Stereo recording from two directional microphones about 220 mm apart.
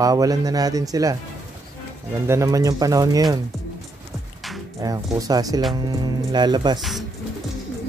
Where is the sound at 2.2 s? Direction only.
15° right (ahead or behind).